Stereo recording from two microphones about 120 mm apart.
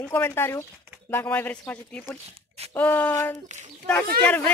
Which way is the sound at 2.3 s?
60° right (ahead or behind).